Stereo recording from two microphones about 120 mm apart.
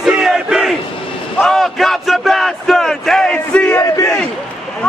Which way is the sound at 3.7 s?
25° left (ahead or behind).